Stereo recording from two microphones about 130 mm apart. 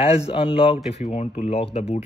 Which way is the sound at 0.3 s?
45° left (ahead or behind).